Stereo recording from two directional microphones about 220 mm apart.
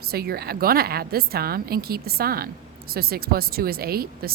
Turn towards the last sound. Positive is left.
turn(degrees=-45)  # may be behind; listen again after turning